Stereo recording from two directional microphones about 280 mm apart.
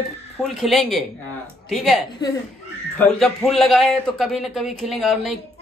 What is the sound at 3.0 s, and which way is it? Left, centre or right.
A woman's voice, centre.